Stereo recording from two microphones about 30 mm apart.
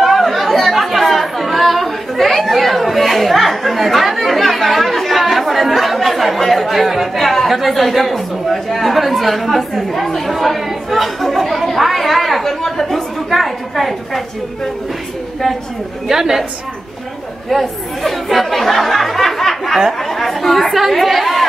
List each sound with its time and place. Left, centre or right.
0.0 s chatter: centre
7.5 s a woman's voice: centre
12.6 s speech: centre
12.9 s a woman's voice: centre
16.1 s a woman's voice: centre
17.5 s speech: centre